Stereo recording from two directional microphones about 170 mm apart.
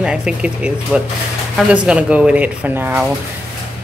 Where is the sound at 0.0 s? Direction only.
5° right (ahead or behind).